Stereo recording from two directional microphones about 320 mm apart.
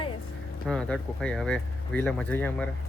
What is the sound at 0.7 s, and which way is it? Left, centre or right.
Speech, centre.